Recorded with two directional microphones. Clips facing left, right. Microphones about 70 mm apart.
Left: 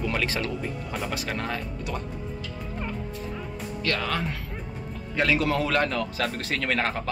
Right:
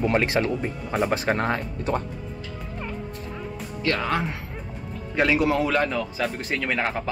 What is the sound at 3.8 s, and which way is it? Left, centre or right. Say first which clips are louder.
A man's voice: right 4 dB; right.